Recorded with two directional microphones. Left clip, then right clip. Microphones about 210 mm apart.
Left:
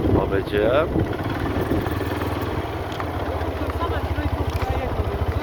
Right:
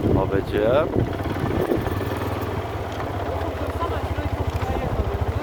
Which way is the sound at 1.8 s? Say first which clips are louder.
Left 1 dB; 50° left (ahead or behind).